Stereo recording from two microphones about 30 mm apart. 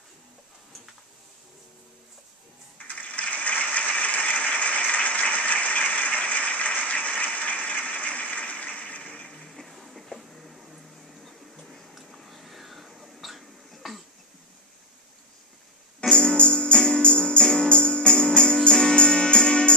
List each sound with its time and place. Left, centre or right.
2.9 s applause: left
7.3 s a sound: left
9.5 s a sound: centre
10.7 s music: centre
11.9 s hiccup: centre
16.0 s music: left
16.7 s music: left
17.0 s music: left
17.4 s music: left
17.6 s music: left